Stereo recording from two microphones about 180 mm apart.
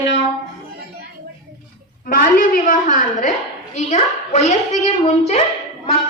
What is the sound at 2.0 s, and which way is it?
A woman's voice, 50° left (ahead or behind).